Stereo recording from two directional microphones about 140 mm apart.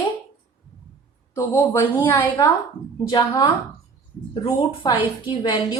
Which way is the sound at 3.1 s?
25° left (ahead or behind).